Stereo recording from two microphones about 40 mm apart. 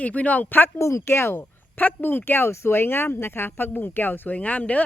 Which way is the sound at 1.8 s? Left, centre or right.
Left.